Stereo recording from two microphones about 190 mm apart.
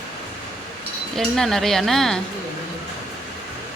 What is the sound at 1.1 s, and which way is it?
Speech, centre (ahead or behind).